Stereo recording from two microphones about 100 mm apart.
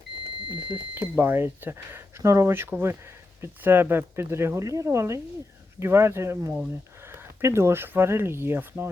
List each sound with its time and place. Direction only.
0.9 s speech: 20° right (ahead or behind)